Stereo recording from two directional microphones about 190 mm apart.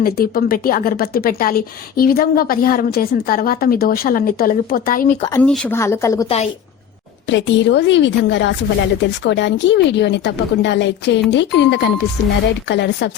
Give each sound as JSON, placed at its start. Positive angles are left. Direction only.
{"t": 0.0, "sound": "a woman's voice", "side_deg": 50}
{"t": 5.3, "sound": "speech", "side_deg": 10}
{"t": 6.2, "sound": "a woman's voice", "side_deg": 35}
{"t": 7.3, "sound": "a woman's voice", "side_deg": 70}